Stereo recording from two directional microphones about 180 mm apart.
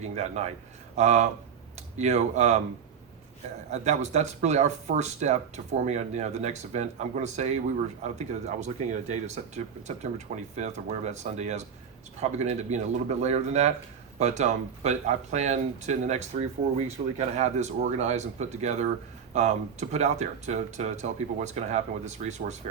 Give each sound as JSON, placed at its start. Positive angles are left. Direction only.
{"t": 0.0, "sound": "speech", "side_deg": -40}
{"t": 3.7, "sound": "speech", "side_deg": -40}